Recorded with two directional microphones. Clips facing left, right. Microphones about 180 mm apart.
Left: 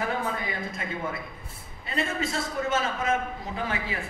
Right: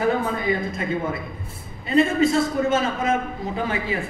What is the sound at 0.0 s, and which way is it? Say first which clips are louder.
A man's voice: right 8 dB; 25° right (ahead or behind).